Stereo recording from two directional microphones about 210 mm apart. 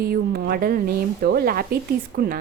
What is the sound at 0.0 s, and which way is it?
A woman's voice, 45° right (ahead or behind).